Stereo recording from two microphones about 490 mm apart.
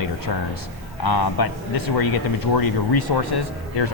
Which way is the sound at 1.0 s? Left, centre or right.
Left.